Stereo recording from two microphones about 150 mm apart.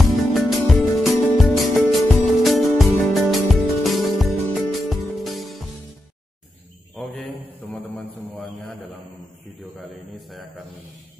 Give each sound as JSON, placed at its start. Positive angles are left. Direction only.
{"t": 0.0, "sound": "music", "side_deg": 0}
{"t": 7.0, "sound": "mantra", "side_deg": 5}
{"t": 7.6, "sound": "a sound", "side_deg": 10}